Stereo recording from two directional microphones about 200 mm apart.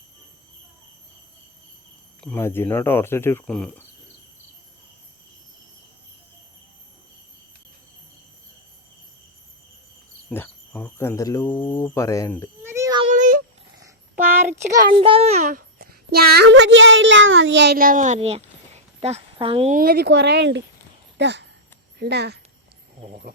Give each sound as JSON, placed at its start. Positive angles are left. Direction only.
{"t": 2.2, "sound": "speech", "side_deg": 10}
{"t": 10.2, "sound": "speech", "side_deg": 10}
{"t": 12.6, "sound": "a sound", "side_deg": -15}
{"t": 13.1, "sound": "a sound", "side_deg": -40}
{"t": 14.8, "sound": "a child's voice", "side_deg": -25}
{"t": 19.7, "sound": "speech", "side_deg": -50}
{"t": 23.0, "sound": "insect", "side_deg": -45}